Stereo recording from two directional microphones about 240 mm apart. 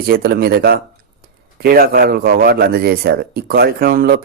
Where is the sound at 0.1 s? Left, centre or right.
Right.